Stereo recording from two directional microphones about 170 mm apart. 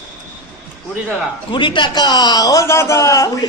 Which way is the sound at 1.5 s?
30° left (ahead or behind).